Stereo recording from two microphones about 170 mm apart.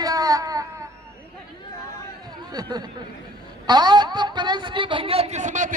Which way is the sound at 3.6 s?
25° right (ahead or behind).